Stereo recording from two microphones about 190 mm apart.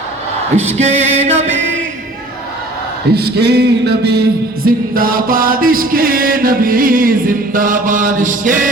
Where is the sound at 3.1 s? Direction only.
60° right (ahead or behind).